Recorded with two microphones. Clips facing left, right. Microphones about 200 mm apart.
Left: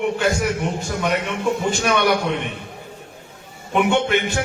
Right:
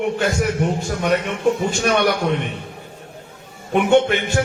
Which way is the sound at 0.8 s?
45° right (ahead or behind).